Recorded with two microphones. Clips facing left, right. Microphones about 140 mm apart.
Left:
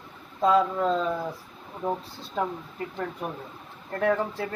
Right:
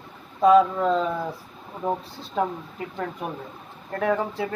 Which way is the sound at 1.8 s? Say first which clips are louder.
Right 2 dB; 20° right (ahead or behind).